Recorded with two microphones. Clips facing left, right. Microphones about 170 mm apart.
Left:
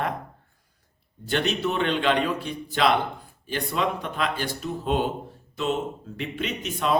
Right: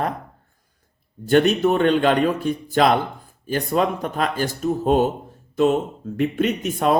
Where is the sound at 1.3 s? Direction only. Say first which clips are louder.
Right 9 dB; 50° right (ahead or behind).